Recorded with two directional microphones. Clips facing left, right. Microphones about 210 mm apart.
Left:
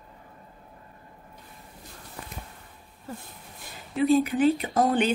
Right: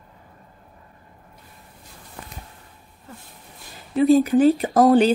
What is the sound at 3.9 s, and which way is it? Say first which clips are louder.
Speech: right 6 dB; 40° right (ahead or behind).